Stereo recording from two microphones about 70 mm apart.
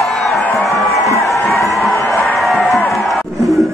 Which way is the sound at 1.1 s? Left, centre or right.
Left.